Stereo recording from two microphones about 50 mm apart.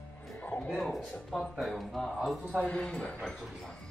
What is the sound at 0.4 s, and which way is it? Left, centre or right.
Music, left.